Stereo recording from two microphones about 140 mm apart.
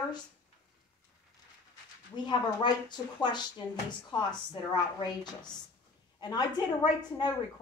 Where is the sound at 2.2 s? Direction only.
30° left (ahead or behind).